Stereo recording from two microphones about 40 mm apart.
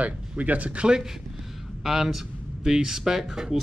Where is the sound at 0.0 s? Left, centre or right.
Right.